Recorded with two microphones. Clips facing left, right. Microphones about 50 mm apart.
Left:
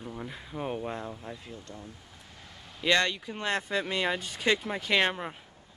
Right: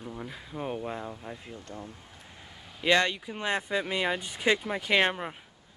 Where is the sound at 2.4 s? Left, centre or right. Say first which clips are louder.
Right 1 dB; centre.